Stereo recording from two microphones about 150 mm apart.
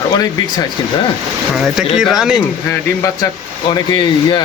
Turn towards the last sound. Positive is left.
turn(degrees=30)  # may be behind; listen again after turning